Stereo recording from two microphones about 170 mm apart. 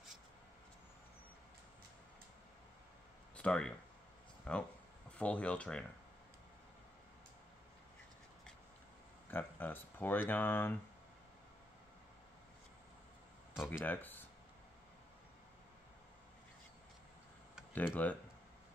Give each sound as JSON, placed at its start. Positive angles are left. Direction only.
{"t": 3.3, "sound": "speech", "side_deg": 5}
{"t": 9.3, "sound": "speech", "side_deg": 10}
{"t": 13.8, "sound": "speech", "side_deg": 10}
{"t": 17.7, "sound": "speech", "side_deg": 10}